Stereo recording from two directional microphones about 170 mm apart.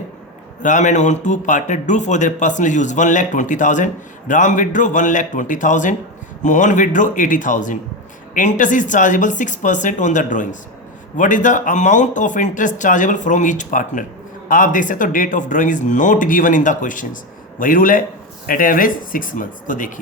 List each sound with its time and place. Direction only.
0.6 s a man's voice: 45° left (ahead or behind)